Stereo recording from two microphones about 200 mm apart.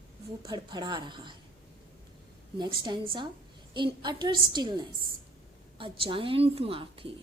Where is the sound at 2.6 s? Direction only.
25° right (ahead or behind).